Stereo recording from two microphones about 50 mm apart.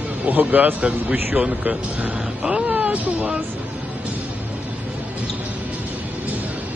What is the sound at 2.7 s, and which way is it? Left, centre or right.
Speech, right.